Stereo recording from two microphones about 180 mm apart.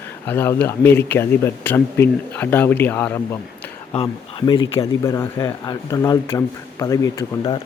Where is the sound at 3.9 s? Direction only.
30° left (ahead or behind).